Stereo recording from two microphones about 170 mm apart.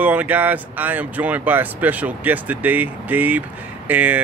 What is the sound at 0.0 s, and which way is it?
Speech, 10° right (ahead or behind).